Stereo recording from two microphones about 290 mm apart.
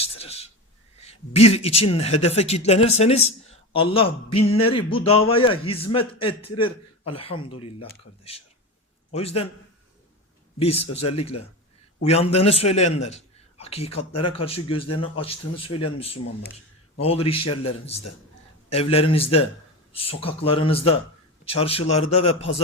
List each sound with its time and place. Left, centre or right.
0.1 s a sound: left
0.9 s a man's voice: left
10.6 s a man's voice: left